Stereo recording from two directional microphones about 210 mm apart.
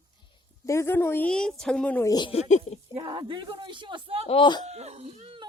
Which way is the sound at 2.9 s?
25° right (ahead or behind).